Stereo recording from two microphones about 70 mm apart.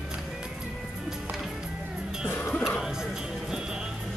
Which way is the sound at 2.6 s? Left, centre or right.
Centre.